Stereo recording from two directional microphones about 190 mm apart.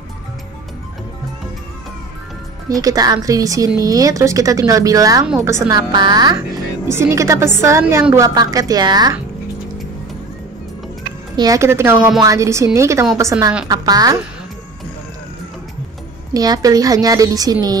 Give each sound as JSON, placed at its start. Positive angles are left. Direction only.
{"t": 2.7, "sound": "a woman's voice", "side_deg": -20}
{"t": 5.7, "sound": "a woman's voice", "side_deg": -20}
{"t": 11.3, "sound": "a woman's voice", "side_deg": -20}
{"t": 16.3, "sound": "a woman's voice", "side_deg": -20}